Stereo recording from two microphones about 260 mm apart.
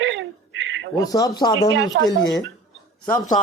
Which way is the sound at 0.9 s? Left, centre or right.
Centre.